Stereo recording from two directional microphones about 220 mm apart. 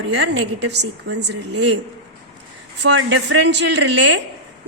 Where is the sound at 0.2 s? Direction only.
50° right (ahead or behind).